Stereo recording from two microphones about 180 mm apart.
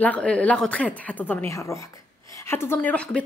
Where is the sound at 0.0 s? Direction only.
5° left (ahead or behind).